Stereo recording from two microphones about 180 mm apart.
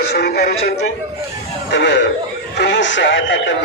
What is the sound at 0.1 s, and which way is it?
Speech, 65° left (ahead or behind).